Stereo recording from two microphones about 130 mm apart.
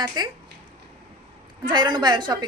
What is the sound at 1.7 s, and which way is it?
Speech, 35° right (ahead or behind).